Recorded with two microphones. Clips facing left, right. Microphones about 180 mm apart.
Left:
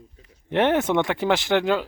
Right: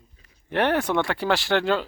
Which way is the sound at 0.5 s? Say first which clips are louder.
Left 2 dB; 20° left (ahead or behind).